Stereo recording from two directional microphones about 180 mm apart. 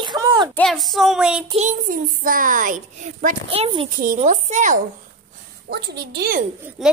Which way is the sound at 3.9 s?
50° right (ahead or behind).